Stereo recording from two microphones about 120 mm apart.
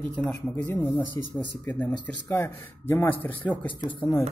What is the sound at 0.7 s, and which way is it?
Speech, 20° left (ahead or behind).